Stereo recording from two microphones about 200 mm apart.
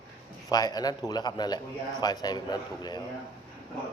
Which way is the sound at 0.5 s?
20° left (ahead or behind).